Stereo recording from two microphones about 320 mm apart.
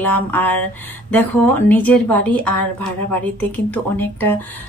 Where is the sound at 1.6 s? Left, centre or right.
Centre.